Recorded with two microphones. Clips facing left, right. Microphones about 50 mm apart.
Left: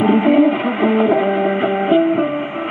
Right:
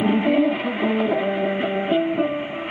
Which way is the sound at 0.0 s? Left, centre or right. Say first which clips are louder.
Left 6 dB; left.